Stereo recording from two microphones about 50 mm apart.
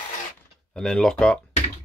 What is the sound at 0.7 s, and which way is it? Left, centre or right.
Speech, centre.